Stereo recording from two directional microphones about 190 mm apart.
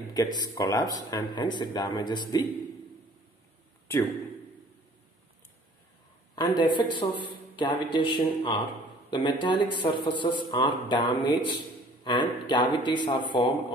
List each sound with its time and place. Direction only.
0.1 s speech: 20° left (ahead or behind)
3.8 s a man's voice: 10° left (ahead or behind)
6.3 s speech: 25° left (ahead or behind)